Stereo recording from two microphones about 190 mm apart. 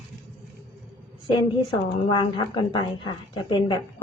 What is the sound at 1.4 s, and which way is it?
A woman's voice, 25° left (ahead or behind).